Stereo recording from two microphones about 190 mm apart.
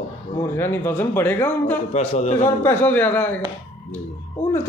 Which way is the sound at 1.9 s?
35° left (ahead or behind).